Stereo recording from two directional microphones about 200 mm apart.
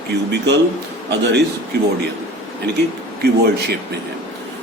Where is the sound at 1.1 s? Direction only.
60° right (ahead or behind).